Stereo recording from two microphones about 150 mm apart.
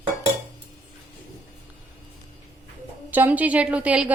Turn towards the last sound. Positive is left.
turn(degrees=-10)  # may be behind; listen again after turning